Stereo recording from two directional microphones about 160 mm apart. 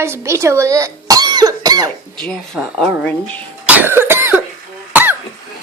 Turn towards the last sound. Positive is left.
turn(degrees=-10)  # may be behind; listen again after turning